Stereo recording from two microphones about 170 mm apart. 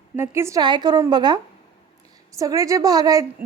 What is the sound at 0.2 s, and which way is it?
Speech, 15° right (ahead or behind).